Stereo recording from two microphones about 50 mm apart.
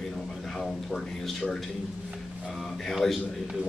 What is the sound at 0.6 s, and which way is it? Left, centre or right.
Speech, centre.